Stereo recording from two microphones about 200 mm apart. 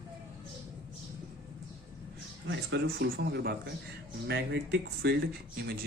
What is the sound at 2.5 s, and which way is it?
A man's voice, 55° right (ahead or behind).